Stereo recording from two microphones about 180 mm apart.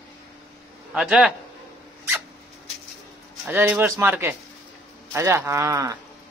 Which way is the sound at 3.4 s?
10° right (ahead or behind).